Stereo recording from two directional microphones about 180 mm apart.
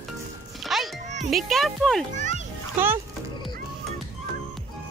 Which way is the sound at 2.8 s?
10° right (ahead or behind).